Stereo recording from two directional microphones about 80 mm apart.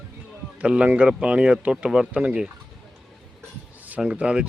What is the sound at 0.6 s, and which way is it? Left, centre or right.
Speech, centre.